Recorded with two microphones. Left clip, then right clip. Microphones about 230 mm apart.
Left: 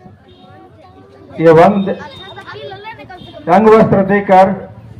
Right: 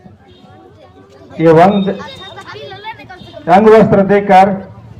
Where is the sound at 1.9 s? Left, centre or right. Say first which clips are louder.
Right 1 dB; right.